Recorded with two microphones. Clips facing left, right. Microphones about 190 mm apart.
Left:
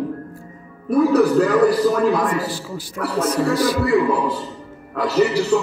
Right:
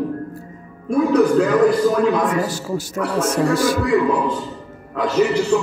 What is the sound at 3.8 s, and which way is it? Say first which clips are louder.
A man's voice: even; 5° left (ahead or behind).